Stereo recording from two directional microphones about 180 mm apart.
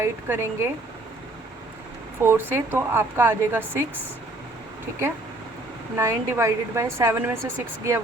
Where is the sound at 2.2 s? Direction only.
10° right (ahead or behind).